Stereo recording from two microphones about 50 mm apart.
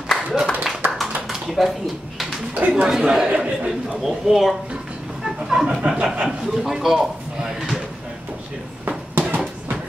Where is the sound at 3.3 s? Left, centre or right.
Right.